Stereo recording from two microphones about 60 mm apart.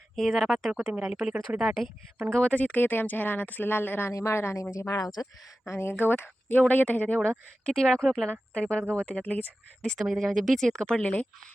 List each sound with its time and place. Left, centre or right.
0.2 s speech: centre
0.7 s speech: centre
2.3 s speech: left
4.1 s speech: left
4.7 s speech: left
5.7 s speech: left
7.6 s speech: centre
8.0 s speech: centre
8.3 s speech: centre
9.2 s speech: left
9.8 s speech: centre
10.1 s speech: centre
11.0 s speech: left